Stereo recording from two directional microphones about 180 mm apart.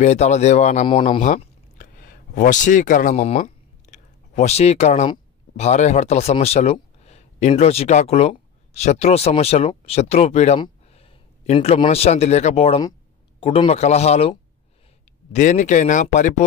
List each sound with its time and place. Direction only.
0.0 s speech: 40° left (ahead or behind)
0.8 s speech: 30° left (ahead or behind)
1.2 s a sound: 45° left (ahead or behind)
5.6 s a man's voice: 40° left (ahead or behind)
15.3 s speech: 40° left (ahead or behind)